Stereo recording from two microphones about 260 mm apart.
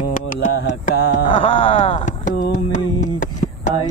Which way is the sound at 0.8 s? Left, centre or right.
Left.